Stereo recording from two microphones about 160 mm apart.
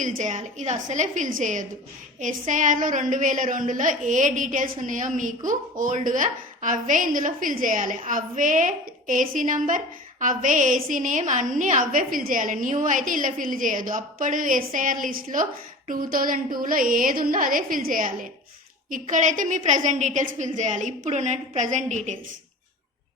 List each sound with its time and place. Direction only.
0.0 s a woman's voice: 50° right (ahead or behind)